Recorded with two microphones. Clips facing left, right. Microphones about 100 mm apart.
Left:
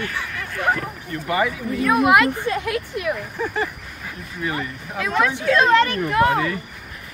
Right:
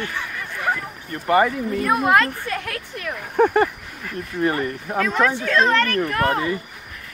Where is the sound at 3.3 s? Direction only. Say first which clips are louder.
Right 8 dB; 55° right (ahead or behind).